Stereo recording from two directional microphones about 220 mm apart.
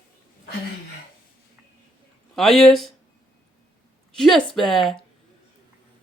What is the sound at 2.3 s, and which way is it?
Speech, centre (ahead or behind).